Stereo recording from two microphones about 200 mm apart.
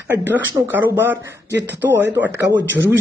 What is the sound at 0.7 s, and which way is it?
Speech, 10° right (ahead or behind).